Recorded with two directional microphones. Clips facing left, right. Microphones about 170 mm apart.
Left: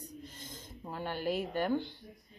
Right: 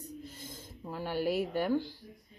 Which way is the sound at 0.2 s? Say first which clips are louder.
Right 2 dB; 10° right (ahead or behind).